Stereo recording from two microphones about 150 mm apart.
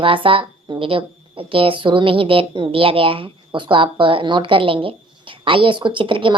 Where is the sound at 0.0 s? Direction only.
35° right (ahead or behind).